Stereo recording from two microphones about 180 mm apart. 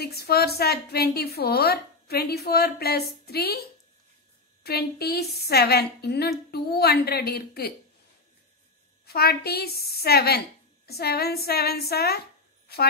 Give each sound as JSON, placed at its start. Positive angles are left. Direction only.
{"t": 0.0, "sound": "a woman's voice", "side_deg": 60}
{"t": 4.6, "sound": "a woman's voice", "side_deg": 60}
{"t": 9.0, "sound": "a woman's voice", "side_deg": 60}